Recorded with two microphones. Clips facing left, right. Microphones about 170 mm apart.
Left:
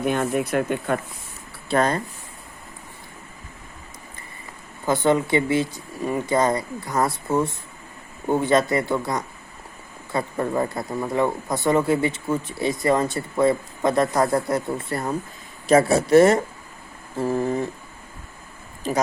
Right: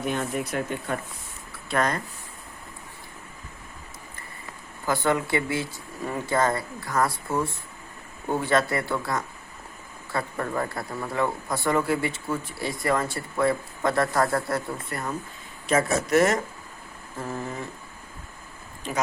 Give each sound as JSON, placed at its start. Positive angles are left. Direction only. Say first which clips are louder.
{"t": 0.1, "sound": "speech", "louder": "left 6 dB", "side_deg": 55}
{"t": 1.7, "sound": "speech", "louder": "left 5 dB", "side_deg": 30}
{"t": 4.9, "sound": "speech", "louder": "left 5 dB", "side_deg": 20}